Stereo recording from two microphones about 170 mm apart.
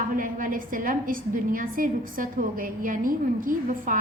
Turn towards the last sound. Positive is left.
turn(degrees=-50)  # may be behind; listen again after turning